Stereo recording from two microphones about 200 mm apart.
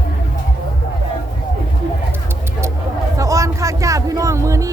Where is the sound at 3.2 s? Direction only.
15° right (ahead or behind).